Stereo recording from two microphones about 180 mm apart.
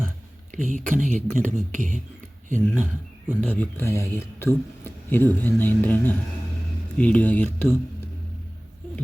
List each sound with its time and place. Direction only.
0.5 s speech: 45° right (ahead or behind)
2.7 s speech: 10° right (ahead or behind)
3.4 s a man's voice: 10° left (ahead or behind)